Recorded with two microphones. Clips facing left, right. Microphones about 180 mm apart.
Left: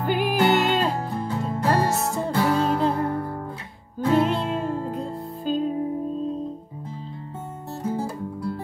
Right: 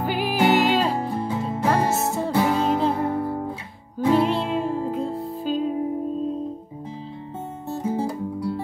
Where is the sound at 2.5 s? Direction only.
Centre (ahead or behind).